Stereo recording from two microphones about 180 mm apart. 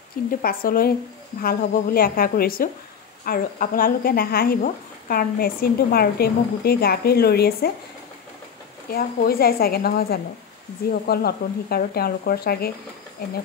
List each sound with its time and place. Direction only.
0.3 s a woman's voice: 55° left (ahead or behind)
8.9 s a woman's voice: 55° left (ahead or behind)